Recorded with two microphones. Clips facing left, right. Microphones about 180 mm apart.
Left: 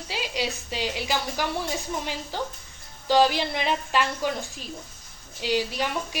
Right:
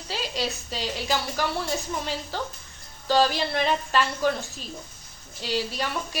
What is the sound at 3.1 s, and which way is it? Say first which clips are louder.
A woman's voice: left 1 dB; 15° left (ahead or behind).